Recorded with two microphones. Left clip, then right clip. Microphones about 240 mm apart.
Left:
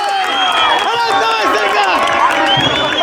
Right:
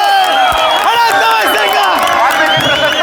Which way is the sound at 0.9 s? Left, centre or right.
Right.